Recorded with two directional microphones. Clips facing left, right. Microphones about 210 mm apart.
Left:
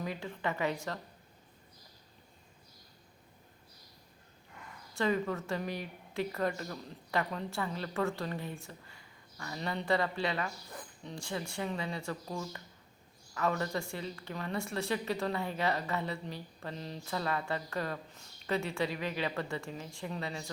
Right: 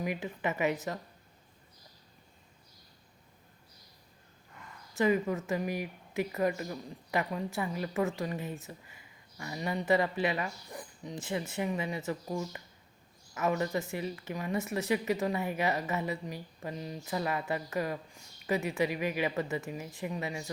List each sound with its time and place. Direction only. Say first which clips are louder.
0.0 s speech: right 3 dB; 20° right (ahead or behind)
4.9 s speech: right 3 dB; 15° right (ahead or behind)